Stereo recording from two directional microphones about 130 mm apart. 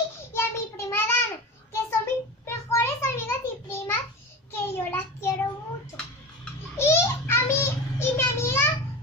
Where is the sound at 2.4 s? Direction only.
20° left (ahead or behind).